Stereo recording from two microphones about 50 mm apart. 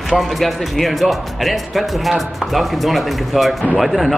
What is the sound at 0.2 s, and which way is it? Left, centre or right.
Speech, centre.